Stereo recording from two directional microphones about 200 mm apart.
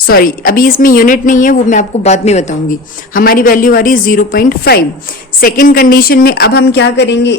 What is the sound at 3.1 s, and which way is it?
A woman's voice, 45° left (ahead or behind).